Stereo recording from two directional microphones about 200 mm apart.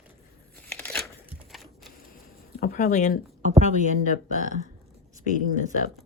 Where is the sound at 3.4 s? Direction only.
35° right (ahead or behind).